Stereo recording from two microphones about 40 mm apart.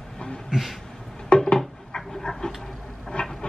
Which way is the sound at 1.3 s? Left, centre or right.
Left.